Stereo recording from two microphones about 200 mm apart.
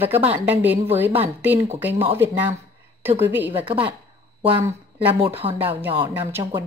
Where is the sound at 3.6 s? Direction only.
25° right (ahead or behind).